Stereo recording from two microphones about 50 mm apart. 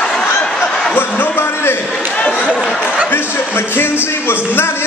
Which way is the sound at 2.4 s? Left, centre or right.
Centre.